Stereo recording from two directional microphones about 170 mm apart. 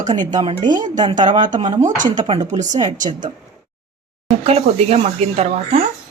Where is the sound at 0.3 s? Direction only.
25° right (ahead or behind).